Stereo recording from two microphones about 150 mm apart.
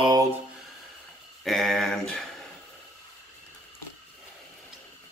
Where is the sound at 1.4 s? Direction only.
Centre (ahead or behind).